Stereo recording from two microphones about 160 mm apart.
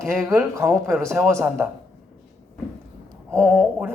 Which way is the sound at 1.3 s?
15° right (ahead or behind).